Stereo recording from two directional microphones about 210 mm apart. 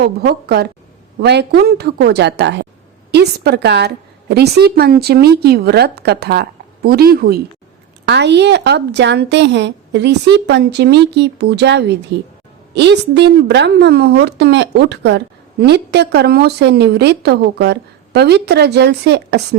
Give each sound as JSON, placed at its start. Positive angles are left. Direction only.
{"t": 0.0, "sound": "a woman's voice", "side_deg": -50}